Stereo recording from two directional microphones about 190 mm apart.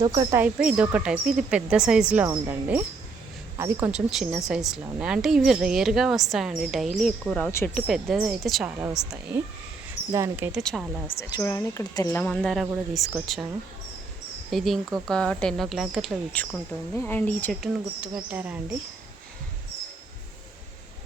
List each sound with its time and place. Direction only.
0.0 s speech: 25° right (ahead or behind)
3.9 s a woman's voice: 5° right (ahead or behind)
7.9 s speech: centre (ahead or behind)
10.1 s speech: 15° right (ahead or behind)
10.6 s speech: 5° left (ahead or behind)
11.2 s a woman's voice: 20° left (ahead or behind)
12.3 s speech: centre (ahead or behind)
14.5 s speech: centre (ahead or behind)